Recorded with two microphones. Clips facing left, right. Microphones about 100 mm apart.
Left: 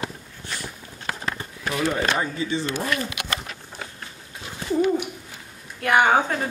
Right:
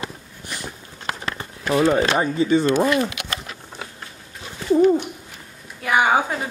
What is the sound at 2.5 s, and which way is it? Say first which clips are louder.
Speech: right 11 dB; 50° right (ahead or behind).